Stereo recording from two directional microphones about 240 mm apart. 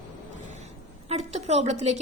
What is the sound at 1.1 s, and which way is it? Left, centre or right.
Speech, right.